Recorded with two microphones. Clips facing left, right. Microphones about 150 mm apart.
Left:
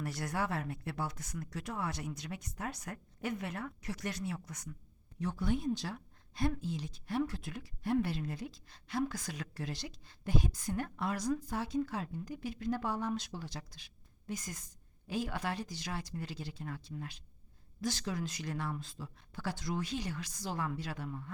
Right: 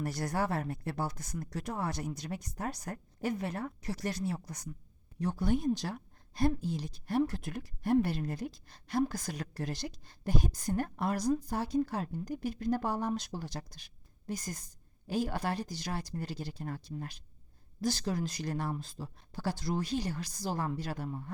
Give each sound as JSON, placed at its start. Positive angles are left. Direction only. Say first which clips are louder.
{"t": 0.0, "sound": "a woman's voice", "louder": "right 3 dB", "side_deg": -40}